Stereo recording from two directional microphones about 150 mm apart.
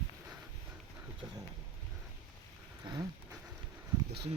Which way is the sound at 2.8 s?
30° right (ahead or behind).